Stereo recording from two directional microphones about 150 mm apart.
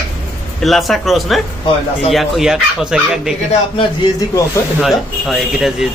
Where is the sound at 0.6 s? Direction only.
Centre (ahead or behind).